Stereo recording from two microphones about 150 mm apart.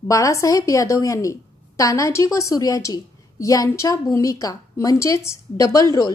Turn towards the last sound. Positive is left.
turn(degrees=25)  # may be behind; listen again after turning